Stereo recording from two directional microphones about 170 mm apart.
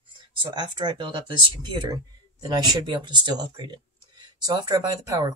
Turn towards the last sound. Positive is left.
turn(degrees=-25)  # may be behind; listen again after turning